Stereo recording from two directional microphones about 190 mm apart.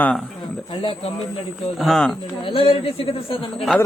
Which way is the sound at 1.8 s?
Centre (ahead or behind).